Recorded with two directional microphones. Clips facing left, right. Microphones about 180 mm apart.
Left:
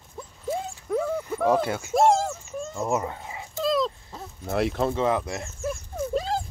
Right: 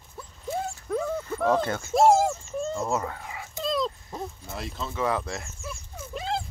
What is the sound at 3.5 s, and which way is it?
Dog, centre (ahead or behind).